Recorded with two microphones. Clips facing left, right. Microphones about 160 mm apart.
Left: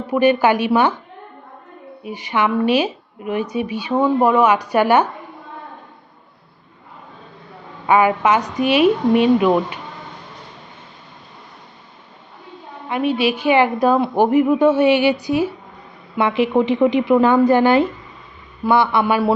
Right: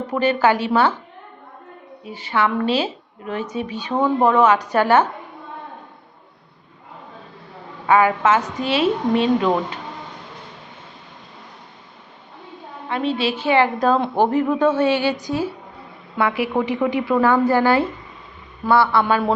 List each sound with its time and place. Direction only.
0.1 s a woman's voice: 15° left (ahead or behind)
2.0 s a woman's voice: 15° left (ahead or behind)
7.9 s a woman's voice: 15° left (ahead or behind)
12.9 s a woman's voice: 15° left (ahead or behind)